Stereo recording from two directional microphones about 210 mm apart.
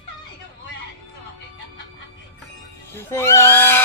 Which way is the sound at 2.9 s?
10° left (ahead or behind).